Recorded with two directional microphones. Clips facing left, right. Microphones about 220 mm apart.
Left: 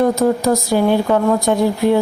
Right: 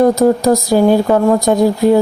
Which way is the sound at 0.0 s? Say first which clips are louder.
Right 4 dB; 35° right (ahead or behind).